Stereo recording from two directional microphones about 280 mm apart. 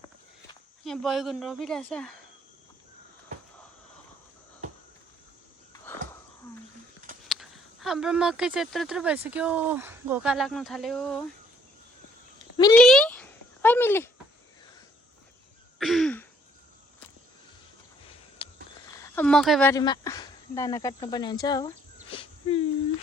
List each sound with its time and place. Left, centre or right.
0.9 s speech: centre
5.9 s wheeze: centre
7.3 s speech: centre
12.7 s a sound: centre
15.8 s throat clearing: centre
19.0 s speech: centre
22.1 s wheeze: centre